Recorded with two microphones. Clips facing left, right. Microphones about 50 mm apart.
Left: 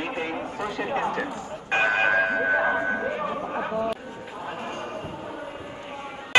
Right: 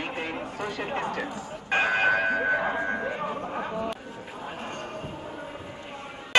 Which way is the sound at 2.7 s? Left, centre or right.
Centre.